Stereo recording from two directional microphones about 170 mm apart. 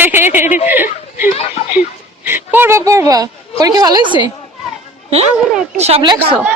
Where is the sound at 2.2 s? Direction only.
10° right (ahead or behind).